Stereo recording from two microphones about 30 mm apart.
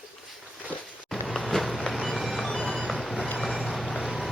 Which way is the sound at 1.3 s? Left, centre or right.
Centre.